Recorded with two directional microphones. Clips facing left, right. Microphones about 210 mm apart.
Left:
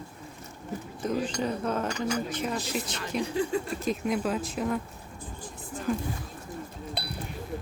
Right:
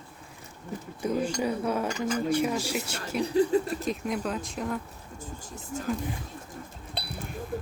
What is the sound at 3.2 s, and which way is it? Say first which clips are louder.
Speech: right 6 dB; 35° right (ahead or behind).